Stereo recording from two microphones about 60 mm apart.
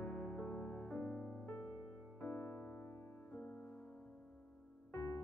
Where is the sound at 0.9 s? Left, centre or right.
Left.